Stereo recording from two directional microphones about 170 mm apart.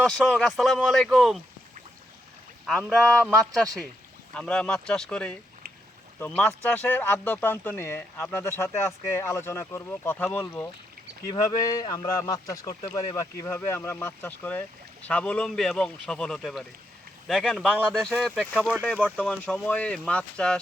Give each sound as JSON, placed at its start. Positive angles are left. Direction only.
{"t": 0.0, "sound": "a man's voice", "side_deg": 5}
{"t": 2.9, "sound": "a man's voice", "side_deg": 5}
{"t": 19.0, "sound": "speech", "side_deg": 5}